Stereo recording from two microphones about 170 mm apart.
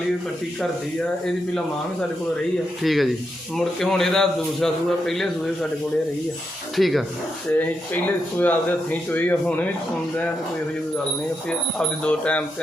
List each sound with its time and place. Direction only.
2.8 s a man's voice: centre (ahead or behind)
6.7 s a man's voice: centre (ahead or behind)
7.6 s speech: 10° left (ahead or behind)
12.0 s speech: 5° left (ahead or behind)